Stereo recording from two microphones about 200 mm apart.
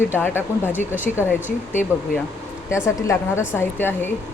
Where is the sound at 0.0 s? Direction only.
10° left (ahead or behind).